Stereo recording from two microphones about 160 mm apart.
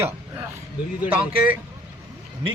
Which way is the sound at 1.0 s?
10° right (ahead or behind).